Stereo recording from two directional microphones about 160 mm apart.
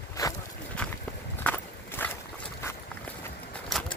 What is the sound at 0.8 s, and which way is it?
Walk, 5° left (ahead or behind).